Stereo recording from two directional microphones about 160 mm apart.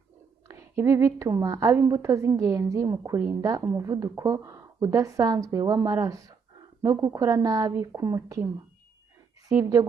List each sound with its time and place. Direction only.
0.5 s a woman's voice: 15° right (ahead or behind)
9.5 s a woman's voice: 20° right (ahead or behind)